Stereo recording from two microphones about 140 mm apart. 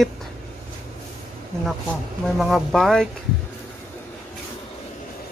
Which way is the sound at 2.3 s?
Centre (ahead or behind).